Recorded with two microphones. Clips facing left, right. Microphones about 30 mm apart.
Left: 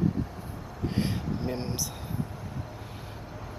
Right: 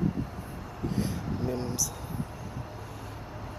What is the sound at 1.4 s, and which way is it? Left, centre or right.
Speech, left.